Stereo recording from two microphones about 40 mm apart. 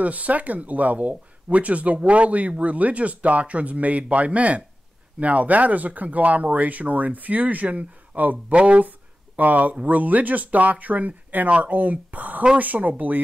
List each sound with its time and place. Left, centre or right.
0.0 s speech: right